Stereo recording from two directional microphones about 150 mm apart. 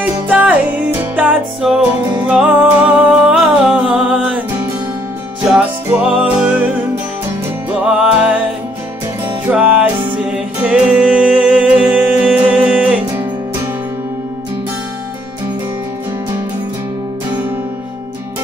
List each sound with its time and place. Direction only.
0.0 s music: 10° right (ahead or behind)
5.4 s music: 5° right (ahead or behind)
8.0 s music: 5° right (ahead or behind)
9.5 s music: 10° right (ahead or behind)